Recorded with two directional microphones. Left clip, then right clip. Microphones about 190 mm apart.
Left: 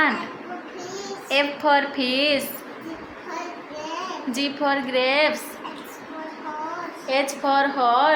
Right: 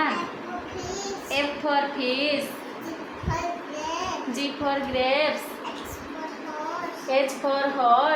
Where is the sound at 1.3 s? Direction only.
55° left (ahead or behind).